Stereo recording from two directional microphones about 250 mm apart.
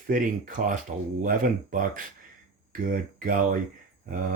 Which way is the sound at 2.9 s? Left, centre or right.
Right.